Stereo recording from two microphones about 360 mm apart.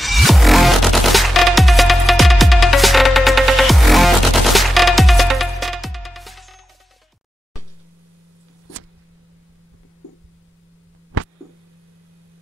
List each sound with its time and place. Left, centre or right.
0.0 s music: centre